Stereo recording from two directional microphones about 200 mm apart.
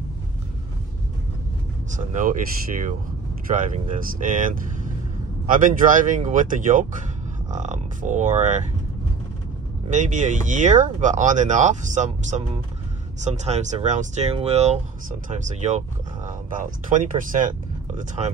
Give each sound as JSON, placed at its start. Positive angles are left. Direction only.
{"t": 2.0, "sound": "speech", "side_deg": -40}
{"t": 3.4, "sound": "speech", "side_deg": -40}
{"t": 9.8, "sound": "speech", "side_deg": -40}